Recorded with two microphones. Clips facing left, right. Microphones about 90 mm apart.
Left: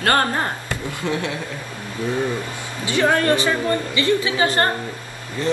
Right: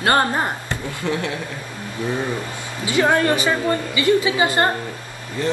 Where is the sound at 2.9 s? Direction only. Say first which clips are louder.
Even; 20° right (ahead or behind).